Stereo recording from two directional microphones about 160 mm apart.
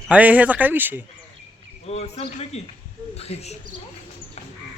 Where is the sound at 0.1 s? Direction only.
10° right (ahead or behind).